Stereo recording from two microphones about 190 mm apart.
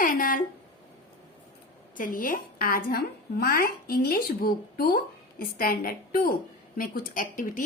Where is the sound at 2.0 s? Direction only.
50° left (ahead or behind).